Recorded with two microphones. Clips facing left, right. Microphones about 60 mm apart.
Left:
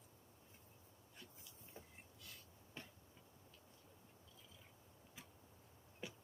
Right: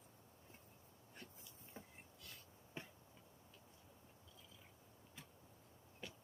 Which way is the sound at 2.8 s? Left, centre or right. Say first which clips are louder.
Right 3 dB; right.